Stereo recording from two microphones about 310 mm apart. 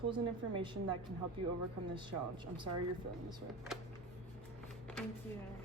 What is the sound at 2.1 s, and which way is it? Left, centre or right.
Speech, centre.